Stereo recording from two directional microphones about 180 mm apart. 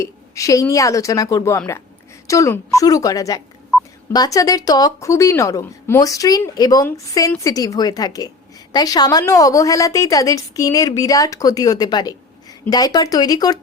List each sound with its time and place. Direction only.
0.0 s a woman's voice: 20° left (ahead or behind)